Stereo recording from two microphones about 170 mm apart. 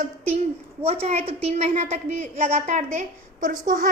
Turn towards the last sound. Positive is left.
turn(degrees=-55)  # may be behind; listen again after turning